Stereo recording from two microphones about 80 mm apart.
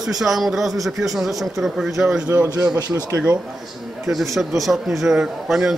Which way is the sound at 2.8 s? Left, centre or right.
Right.